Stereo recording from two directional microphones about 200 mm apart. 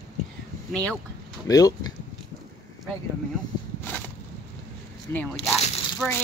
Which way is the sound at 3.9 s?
10° left (ahead or behind).